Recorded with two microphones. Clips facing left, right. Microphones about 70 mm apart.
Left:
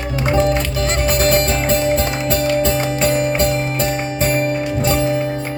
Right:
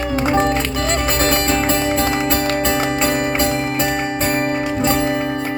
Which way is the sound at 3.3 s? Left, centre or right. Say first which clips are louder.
Left 1 dB; right.